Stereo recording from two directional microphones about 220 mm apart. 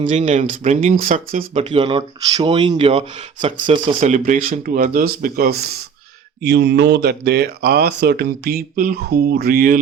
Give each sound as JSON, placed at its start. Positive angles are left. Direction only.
{"t": 0.0, "sound": "speech", "side_deg": -35}